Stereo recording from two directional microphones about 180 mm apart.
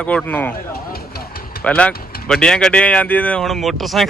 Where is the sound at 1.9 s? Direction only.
55° left (ahead or behind).